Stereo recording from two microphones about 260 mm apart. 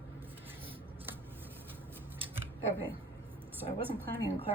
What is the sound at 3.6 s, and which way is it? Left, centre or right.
Speech, centre.